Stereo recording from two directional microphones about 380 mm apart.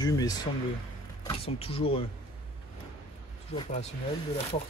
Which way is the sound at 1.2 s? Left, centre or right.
Centre.